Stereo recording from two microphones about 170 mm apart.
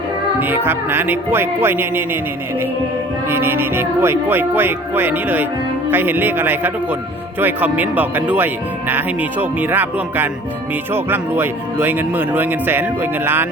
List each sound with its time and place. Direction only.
0.3 s speech: 10° right (ahead or behind)
3.2 s speech: 15° right (ahead or behind)